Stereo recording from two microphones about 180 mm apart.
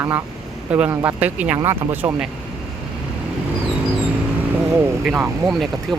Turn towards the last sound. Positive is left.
turn(degrees=0)  # may be behind; listen again after turning